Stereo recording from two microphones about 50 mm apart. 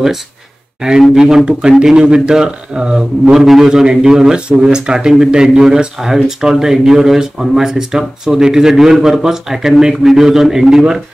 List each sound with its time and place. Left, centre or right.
1.1 s speech: centre